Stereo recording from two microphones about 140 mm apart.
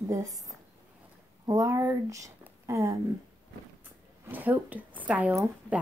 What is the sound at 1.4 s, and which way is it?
Speech, 25° right (ahead or behind).